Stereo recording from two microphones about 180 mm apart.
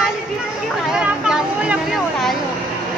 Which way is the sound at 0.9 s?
5° right (ahead or behind).